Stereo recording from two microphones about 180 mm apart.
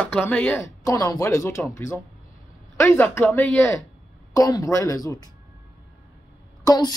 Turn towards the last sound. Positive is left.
turn(degrees=20)  # may be behind; listen again after turning